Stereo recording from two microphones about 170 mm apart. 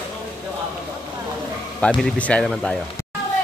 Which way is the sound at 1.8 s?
5° left (ahead or behind).